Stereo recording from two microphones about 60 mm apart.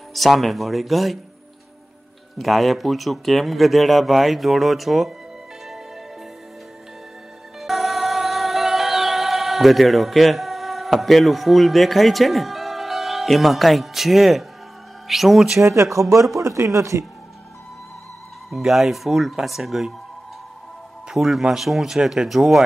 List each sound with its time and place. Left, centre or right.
0.1 s speech: centre
2.3 s speech: centre
7.6 s music: centre
15.0 s speech: centre
15.6 s speech: right
18.5 s speech: centre
21.1 s speech: centre